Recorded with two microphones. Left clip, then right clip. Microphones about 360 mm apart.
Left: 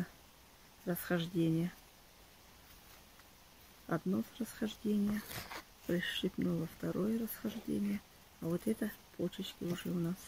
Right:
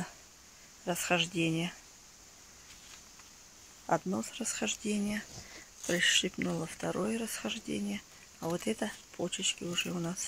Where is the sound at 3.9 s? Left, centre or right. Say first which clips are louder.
Right 6 dB; right.